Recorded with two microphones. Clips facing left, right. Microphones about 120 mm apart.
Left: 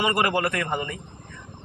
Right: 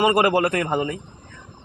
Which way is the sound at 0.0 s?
45° right (ahead or behind).